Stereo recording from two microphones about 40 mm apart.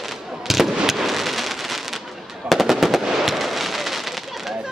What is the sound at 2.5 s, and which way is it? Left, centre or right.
Fireworks, centre.